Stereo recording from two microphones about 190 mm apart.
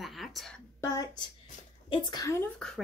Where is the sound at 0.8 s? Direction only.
20° left (ahead or behind).